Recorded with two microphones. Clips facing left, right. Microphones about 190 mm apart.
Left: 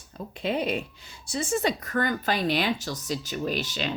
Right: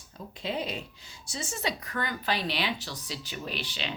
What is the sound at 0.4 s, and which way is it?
Speech, 55° left (ahead or behind).